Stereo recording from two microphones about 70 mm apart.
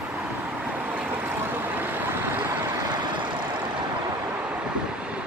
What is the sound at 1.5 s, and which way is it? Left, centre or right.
Vehicle, right.